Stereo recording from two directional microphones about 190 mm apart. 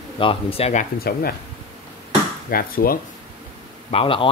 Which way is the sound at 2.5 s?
50° left (ahead or behind).